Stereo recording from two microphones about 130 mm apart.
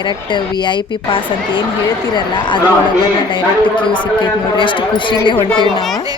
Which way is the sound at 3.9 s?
40° left (ahead or behind).